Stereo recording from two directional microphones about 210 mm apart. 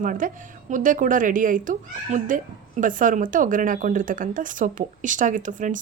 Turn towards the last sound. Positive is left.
turn(degrees=-35)  # may be behind; listen again after turning